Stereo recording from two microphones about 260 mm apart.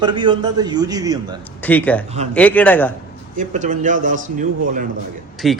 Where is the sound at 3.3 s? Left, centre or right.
Right.